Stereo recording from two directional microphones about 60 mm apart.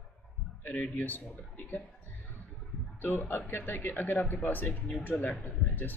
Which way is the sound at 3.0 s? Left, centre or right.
Left.